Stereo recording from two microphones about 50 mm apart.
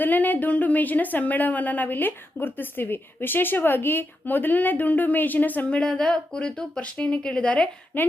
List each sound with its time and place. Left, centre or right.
0.0 s speech: left
5.7 s speech: centre
7.9 s speech: left